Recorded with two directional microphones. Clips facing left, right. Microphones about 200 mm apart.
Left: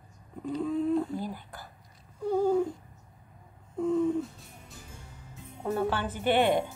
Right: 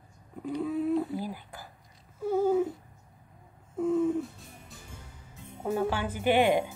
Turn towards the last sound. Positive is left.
turn(degrees=-10)  # may be behind; listen again after turning